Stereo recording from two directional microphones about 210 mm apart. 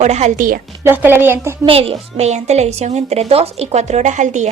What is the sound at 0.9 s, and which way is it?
Speech, 10° right (ahead or behind).